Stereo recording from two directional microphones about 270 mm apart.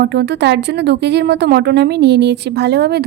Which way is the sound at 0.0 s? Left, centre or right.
Right.